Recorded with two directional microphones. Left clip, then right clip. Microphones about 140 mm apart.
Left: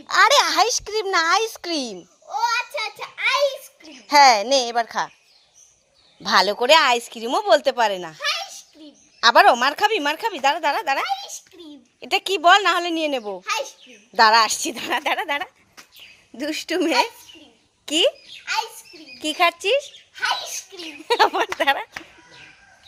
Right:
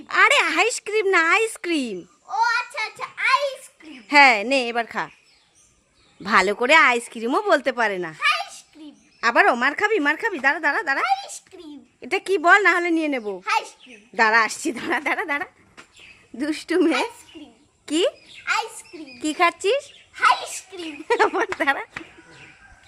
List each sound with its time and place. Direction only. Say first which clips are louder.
0.1 s a woman's voice: left 1 dB; 5° right (ahead or behind)
2.3 s a sound: right 1 dB; 20° right (ahead or behind)
4.0 s a woman's voice: left 1 dB; centre (ahead or behind)
6.2 s a woman's voice: left 1 dB; 5° right (ahead or behind)
9.2 s a woman's voice: left 4 dB; 5° left (ahead or behind)
11.0 s a sound: right 3 dB; 15° right (ahead or behind)
11.9 s a woman's voice: left 1 dB; centre (ahead or behind)
13.4 s a woman's voice: right 2 dB; 15° right (ahead or behind)
14.1 s a woman's voice: left 3 dB; 5° left (ahead or behind)
19.2 s a woman's voice: even; centre (ahead or behind)
20.2 s a woman's voice: right 5 dB; 15° right (ahead or behind)
20.8 s a woman's voice: left 2 dB; 5° left (ahead or behind)